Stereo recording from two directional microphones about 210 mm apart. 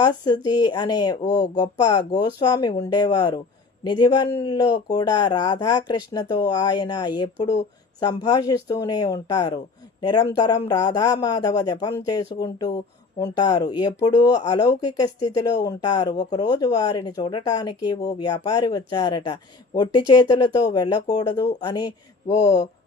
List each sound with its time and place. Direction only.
0.0 s speech: 20° left (ahead or behind)